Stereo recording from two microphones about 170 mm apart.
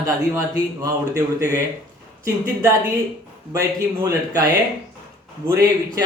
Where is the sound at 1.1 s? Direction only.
20° right (ahead or behind).